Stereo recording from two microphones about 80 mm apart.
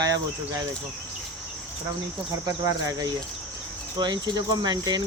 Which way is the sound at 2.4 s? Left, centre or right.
Right.